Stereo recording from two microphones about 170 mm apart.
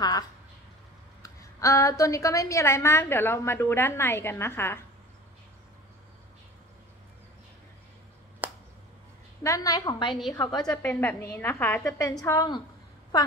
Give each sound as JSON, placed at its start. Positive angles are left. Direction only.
{"t": 1.2, "sound": "a woman's voice", "side_deg": 20}
{"t": 8.4, "sound": "a sound", "side_deg": -10}
{"t": 9.4, "sound": "a woman's voice", "side_deg": 20}
{"t": 10.6, "sound": "a woman's voice", "side_deg": 10}